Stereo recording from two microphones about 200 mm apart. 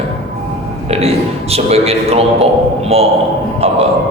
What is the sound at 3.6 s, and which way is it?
Speech, 30° right (ahead or behind).